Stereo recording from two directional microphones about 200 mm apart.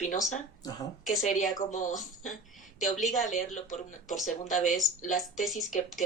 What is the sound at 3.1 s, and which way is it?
Speech, 40° left (ahead or behind).